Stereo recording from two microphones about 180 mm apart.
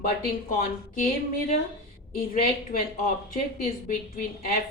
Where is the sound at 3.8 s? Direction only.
50° left (ahead or behind).